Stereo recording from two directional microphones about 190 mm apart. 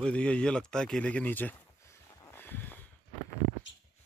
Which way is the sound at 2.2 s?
10° left (ahead or behind).